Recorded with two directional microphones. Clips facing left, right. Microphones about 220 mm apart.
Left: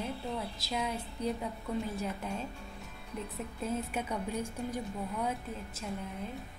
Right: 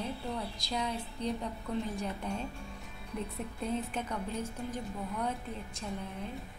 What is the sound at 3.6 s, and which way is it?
A woman's voice, 10° left (ahead or behind).